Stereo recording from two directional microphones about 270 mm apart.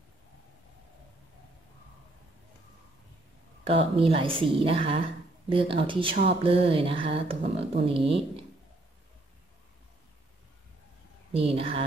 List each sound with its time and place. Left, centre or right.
3.6 s speech: right
11.3 s speech: right